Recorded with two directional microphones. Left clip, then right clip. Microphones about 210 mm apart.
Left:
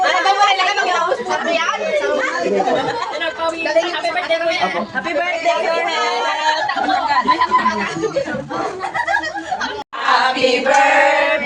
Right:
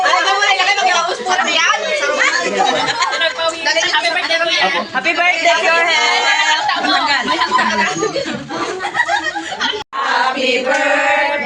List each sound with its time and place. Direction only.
5.0 s a man's voice: 15° right (ahead or behind)